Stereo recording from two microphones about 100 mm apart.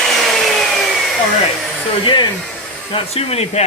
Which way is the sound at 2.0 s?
50° left (ahead or behind).